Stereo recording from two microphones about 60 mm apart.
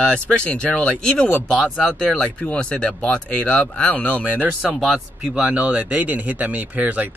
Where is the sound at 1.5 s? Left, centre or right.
Centre.